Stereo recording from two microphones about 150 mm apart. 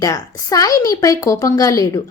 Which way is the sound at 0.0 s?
20° left (ahead or behind).